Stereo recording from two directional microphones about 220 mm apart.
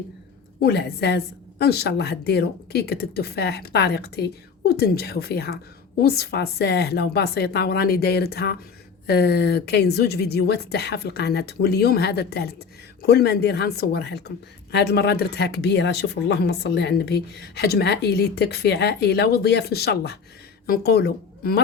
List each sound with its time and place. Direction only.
0.6 s a woman's voice: 50° left (ahead or behind)